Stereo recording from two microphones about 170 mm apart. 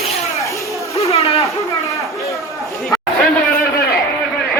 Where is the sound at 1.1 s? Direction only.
35° left (ahead or behind).